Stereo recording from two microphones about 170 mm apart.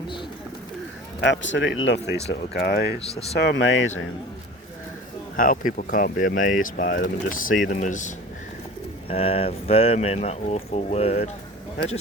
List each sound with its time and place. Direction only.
1.2 s speech: 90° left
2.5 s speech: 65° left (ahead or behind)
3.3 s speech: 90° left
5.4 s speech: 55° left (ahead or behind)
9.0 s speech: 35° left (ahead or behind)